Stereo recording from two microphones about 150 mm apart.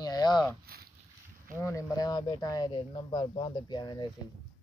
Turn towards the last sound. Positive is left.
turn(degrees=30)  # may be behind; listen again after turning